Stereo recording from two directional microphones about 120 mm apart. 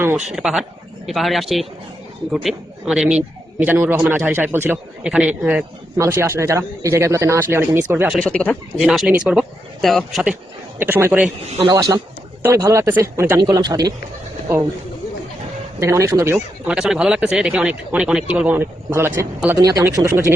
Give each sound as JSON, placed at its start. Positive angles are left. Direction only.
{"t": 0.3, "sound": "a man's voice", "side_deg": -5}
{"t": 6.0, "sound": "speech", "side_deg": -25}
{"t": 8.2, "sound": "speech", "side_deg": 10}
{"t": 8.8, "sound": "speech", "side_deg": -5}
{"t": 10.8, "sound": "speech", "side_deg": -15}
{"t": 11.4, "sound": "speech", "side_deg": -65}
{"t": 11.7, "sound": "speech", "side_deg": -25}
{"t": 13.4, "sound": "speech", "side_deg": -35}
{"t": 15.8, "sound": "speech", "side_deg": -25}
{"t": 16.6, "sound": "speech", "side_deg": -5}
{"t": 19.5, "sound": "speech", "side_deg": -30}